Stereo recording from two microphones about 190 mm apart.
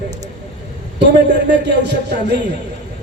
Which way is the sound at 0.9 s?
65° right (ahead or behind).